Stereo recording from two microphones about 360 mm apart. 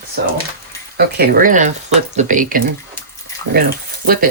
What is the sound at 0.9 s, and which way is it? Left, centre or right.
Speech, right.